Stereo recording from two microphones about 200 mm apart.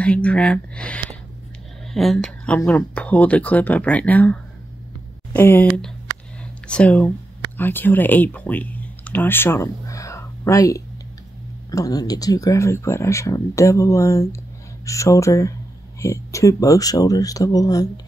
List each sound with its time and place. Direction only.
0.0 s speech: 5° left (ahead or behind)